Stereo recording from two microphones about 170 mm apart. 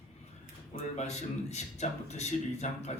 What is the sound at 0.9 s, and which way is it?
A man's voice, 40° left (ahead or behind).